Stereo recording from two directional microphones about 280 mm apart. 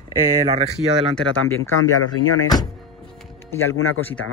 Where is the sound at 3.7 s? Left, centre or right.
Left.